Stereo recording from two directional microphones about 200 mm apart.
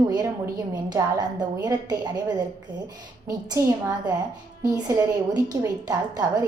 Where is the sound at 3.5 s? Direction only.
20° right (ahead or behind).